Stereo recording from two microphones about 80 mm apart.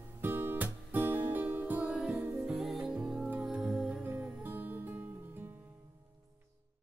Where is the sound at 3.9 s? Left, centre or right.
Right.